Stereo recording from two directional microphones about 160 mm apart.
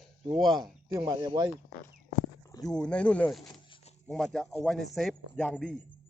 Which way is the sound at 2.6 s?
5° left (ahead or behind).